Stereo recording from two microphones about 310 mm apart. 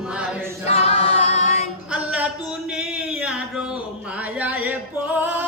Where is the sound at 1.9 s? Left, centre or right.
Centre.